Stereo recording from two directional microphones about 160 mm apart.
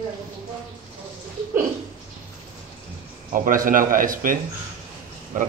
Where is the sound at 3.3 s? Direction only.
60° right (ahead or behind).